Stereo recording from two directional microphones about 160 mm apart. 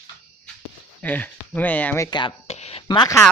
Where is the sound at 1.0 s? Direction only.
10° left (ahead or behind).